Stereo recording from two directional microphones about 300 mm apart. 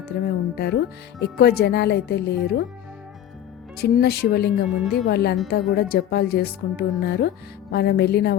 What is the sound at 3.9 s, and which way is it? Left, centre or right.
A woman's voice, left.